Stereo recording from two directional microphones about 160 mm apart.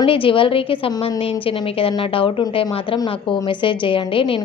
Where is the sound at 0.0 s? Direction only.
35° left (ahead or behind).